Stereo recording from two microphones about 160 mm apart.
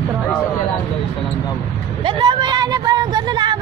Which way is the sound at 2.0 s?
30° right (ahead or behind).